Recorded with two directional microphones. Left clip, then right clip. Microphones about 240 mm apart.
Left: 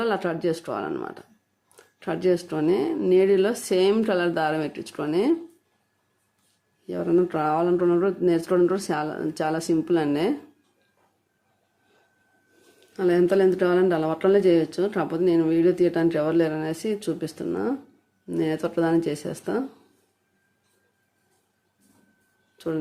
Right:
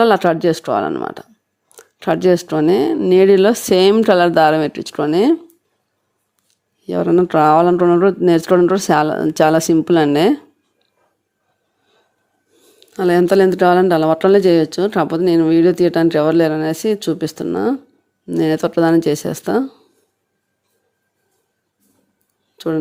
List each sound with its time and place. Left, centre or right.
0.0 s a woman's voice: right
6.8 s a woman's voice: right
12.9 s a woman's voice: right
22.5 s speech: right